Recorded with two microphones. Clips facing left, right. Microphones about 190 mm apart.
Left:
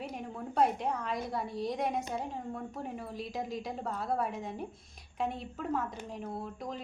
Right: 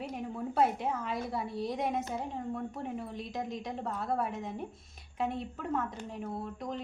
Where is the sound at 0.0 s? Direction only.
Centre (ahead or behind).